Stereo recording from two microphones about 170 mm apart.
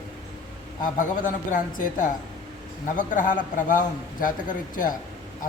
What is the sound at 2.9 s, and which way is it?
A man's voice, 50° left (ahead or behind).